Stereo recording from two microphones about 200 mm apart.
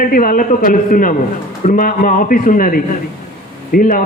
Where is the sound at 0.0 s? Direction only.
45° left (ahead or behind).